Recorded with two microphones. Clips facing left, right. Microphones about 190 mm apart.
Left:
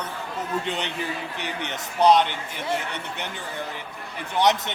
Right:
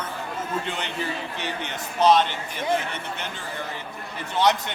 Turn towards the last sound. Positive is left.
turn(degrees=20)  # may be behind; listen again after turning